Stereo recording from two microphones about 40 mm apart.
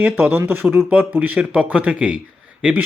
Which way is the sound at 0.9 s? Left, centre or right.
Right.